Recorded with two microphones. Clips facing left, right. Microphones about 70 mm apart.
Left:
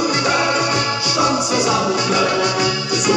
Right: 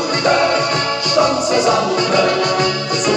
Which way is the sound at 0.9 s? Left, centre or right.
Right.